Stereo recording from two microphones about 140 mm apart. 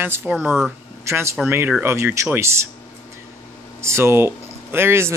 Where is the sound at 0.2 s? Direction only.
Centre (ahead or behind).